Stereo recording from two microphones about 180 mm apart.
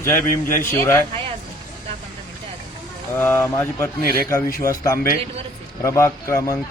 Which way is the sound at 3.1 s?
10° left (ahead or behind).